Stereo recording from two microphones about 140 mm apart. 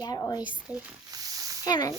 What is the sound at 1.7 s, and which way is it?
Speech, 25° left (ahead or behind).